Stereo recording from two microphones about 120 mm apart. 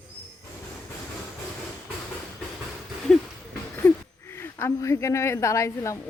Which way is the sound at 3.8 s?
20° left (ahead or behind).